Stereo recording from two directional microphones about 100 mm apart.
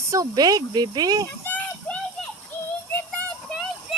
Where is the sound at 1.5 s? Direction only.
15° left (ahead or behind).